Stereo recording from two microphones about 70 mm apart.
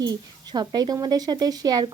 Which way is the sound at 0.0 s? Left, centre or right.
Right.